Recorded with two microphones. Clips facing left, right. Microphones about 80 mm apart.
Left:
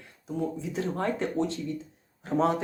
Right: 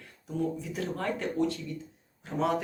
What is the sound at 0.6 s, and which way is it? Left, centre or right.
Speech, left.